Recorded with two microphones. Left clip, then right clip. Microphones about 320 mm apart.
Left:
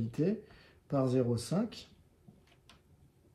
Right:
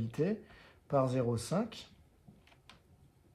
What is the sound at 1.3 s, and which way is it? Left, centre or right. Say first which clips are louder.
Speech: even; right.